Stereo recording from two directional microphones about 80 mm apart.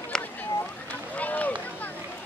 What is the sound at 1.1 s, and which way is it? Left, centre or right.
Boat, centre.